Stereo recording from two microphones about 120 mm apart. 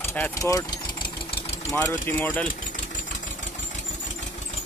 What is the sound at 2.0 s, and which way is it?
Speech, 15° left (ahead or behind).